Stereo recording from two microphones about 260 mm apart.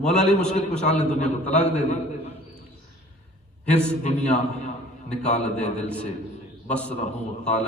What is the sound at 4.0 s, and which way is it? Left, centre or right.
A man's voice, left.